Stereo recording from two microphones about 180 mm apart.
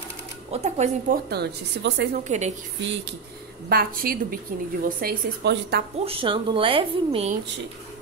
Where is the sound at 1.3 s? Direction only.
70° right (ahead or behind).